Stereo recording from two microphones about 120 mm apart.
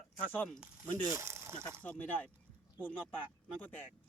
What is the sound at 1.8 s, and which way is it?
Speech, 10° left (ahead or behind).